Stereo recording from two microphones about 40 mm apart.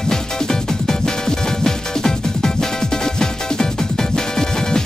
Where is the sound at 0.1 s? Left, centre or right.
Centre.